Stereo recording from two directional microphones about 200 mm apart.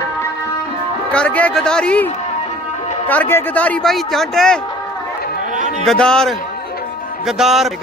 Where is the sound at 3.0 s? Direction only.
10° left (ahead or behind).